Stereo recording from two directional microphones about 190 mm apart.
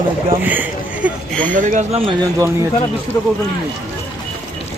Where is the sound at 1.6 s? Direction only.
35° right (ahead or behind).